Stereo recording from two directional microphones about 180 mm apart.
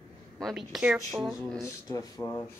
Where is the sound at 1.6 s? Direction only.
15° left (ahead or behind).